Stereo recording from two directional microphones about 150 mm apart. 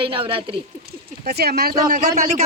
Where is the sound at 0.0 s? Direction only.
35° right (ahead or behind).